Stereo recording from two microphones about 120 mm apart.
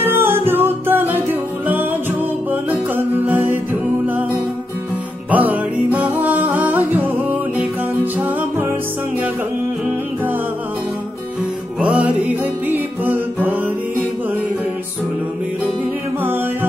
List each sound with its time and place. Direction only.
0.0 s music: 20° right (ahead or behind)
2.5 s music: 15° right (ahead or behind)
5.3 s music: 15° right (ahead or behind)
11.8 s music: 10° right (ahead or behind)